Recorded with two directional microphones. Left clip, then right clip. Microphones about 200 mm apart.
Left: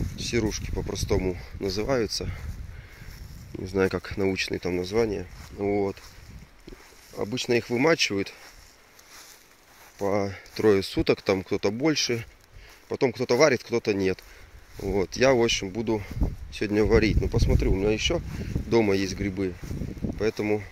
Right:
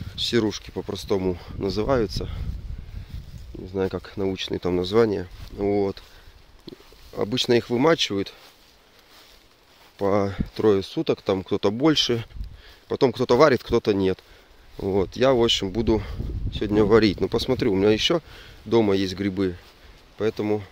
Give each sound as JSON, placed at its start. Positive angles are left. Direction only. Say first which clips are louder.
{"t": 0.1, "sound": "speech", "louder": "right 5 dB", "side_deg": -30}
{"t": 3.6, "sound": "speech", "louder": "left 1 dB", "side_deg": 5}
{"t": 4.6, "sound": "speech", "louder": "right 5 dB", "side_deg": -20}
{"t": 7.2, "sound": "speech", "louder": "right 4 dB", "side_deg": -30}
{"t": 9.9, "sound": "speech", "louder": "right 4 dB", "side_deg": -25}
{"t": 10.5, "sound": "speech", "louder": "right 1 dB", "side_deg": -10}
{"t": 11.3, "sound": "speech", "louder": "right 3 dB", "side_deg": -15}
{"t": 13.9, "sound": "speech", "louder": "right 3 dB", "side_deg": -15}
{"t": 15.5, "sound": "speech", "louder": "right 5 dB", "side_deg": -30}
{"t": 16.5, "sound": "speech", "louder": "right 4 dB", "side_deg": -15}
{"t": 18.7, "sound": "speech", "louder": "right 3 dB", "side_deg": -15}
{"t": 20.2, "sound": "speech", "louder": "right 2 dB", "side_deg": -10}